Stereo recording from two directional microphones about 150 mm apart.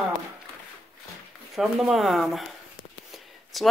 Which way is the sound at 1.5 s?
Centre (ahead or behind).